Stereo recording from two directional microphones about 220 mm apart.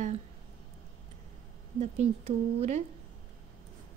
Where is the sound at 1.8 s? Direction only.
30° right (ahead or behind).